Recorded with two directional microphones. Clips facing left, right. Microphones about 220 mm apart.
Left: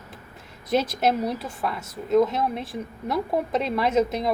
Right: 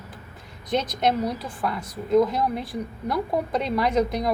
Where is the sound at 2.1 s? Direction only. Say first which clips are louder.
Even; centre (ahead or behind).